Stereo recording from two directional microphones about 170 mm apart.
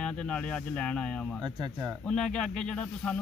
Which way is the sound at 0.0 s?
5° left (ahead or behind).